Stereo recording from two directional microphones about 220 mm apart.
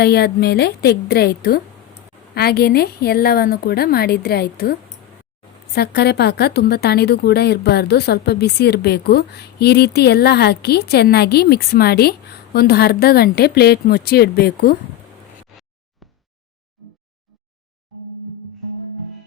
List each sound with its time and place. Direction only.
0.0 s a woman's voice: 45° left (ahead or behind)
16.8 s music: centre (ahead or behind)